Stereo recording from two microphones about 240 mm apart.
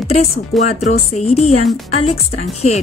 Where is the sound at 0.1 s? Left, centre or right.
Left.